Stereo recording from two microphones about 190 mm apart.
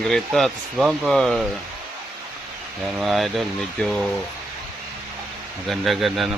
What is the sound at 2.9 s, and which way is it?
Speech, centre (ahead or behind).